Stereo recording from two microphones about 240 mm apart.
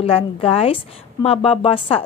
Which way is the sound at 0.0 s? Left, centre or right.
Left.